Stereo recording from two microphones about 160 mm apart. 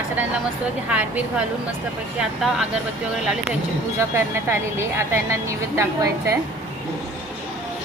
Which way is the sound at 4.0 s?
15° right (ahead or behind).